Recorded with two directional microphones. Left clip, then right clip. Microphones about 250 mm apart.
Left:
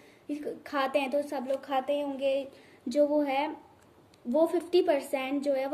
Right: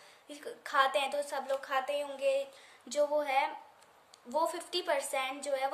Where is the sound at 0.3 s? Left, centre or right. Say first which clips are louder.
Left 2 dB; centre.